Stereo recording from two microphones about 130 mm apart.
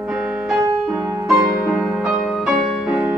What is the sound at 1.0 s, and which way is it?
Music, 20° right (ahead or behind).